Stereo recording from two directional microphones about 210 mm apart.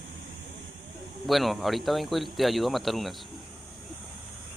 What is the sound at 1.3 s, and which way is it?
Speech, centre (ahead or behind).